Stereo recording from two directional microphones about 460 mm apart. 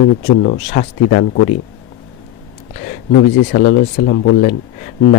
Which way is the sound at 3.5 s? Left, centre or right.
Centre.